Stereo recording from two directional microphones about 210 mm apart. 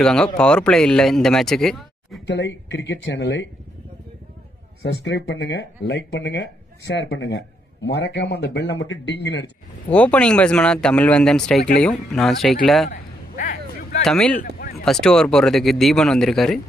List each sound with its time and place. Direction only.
0.0 s speech: 5° left (ahead or behind)
2.2 s a man's voice: 55° left (ahead or behind)
4.8 s a man's voice: 55° left (ahead or behind)
9.8 s speech: 5° left (ahead or behind)
12.9 s a sound: 45° left (ahead or behind)
14.0 s speech: 5° left (ahead or behind)